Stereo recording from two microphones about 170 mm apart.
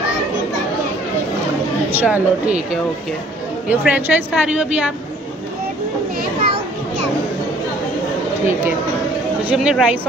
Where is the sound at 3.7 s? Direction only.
10° right (ahead or behind).